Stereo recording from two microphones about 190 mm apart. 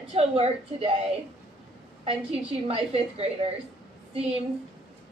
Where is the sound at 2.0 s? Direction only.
30° right (ahead or behind).